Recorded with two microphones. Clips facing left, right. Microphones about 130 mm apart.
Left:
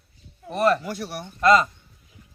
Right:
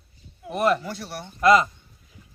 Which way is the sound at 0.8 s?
10° left (ahead or behind).